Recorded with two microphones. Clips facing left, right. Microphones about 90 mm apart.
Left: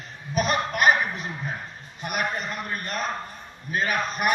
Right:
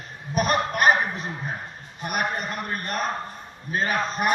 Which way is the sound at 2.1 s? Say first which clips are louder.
Right 1 dB; 45° right (ahead or behind).